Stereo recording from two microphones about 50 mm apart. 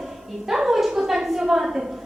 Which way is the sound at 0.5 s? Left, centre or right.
Centre.